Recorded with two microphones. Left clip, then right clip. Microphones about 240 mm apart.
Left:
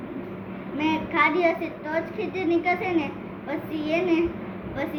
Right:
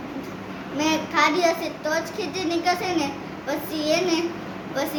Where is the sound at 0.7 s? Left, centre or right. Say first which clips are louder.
Right 1 dB; centre.